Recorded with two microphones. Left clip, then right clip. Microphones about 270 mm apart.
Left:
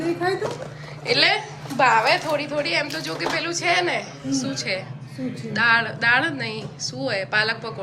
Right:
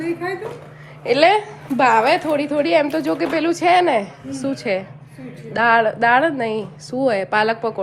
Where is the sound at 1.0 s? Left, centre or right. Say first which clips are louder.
Right 5 dB; centre.